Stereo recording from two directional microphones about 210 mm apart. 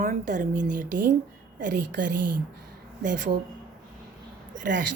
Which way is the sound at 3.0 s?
40° right (ahead or behind).